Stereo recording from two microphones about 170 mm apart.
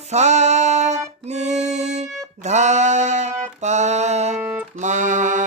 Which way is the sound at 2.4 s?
45° right (ahead or behind).